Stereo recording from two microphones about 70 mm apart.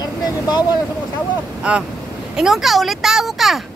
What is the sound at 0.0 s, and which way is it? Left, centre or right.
Vehicle, left.